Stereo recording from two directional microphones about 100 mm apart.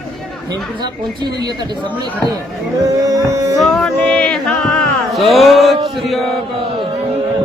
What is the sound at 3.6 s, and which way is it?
Music, centre (ahead or behind).